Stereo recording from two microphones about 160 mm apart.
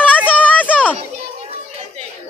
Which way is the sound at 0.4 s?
10° left (ahead or behind).